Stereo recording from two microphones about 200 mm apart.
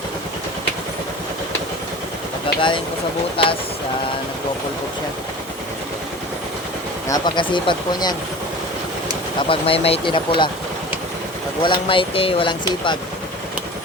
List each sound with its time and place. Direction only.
2.6 s speech: 25° left (ahead or behind)
7.1 s speech: 25° left (ahead or behind)
9.4 s speech: 25° left (ahead or behind)
11.6 s speech: 25° left (ahead or behind)